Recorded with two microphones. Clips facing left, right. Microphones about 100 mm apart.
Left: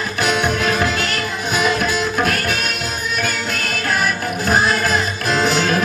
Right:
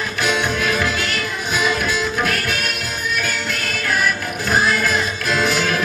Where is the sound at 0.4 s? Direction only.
30° left (ahead or behind).